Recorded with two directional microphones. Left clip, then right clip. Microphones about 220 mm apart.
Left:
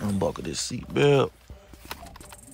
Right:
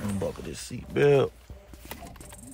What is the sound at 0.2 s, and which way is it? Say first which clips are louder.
Speech: left 8 dB; 20° left (ahead or behind).